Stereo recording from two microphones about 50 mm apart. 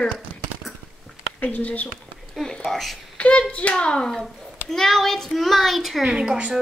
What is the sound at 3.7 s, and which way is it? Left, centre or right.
Speech, centre.